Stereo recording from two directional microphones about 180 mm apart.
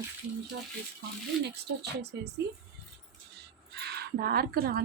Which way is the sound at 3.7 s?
65° right (ahead or behind).